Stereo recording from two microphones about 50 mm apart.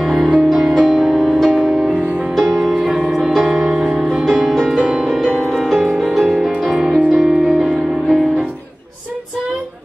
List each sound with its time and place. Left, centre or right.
0.0 s music: centre
0.8 s music: centre
2.3 s music: centre
2.7 s music: centre
5.0 s music: centre
5.9 s music: centre
6.6 s music: centre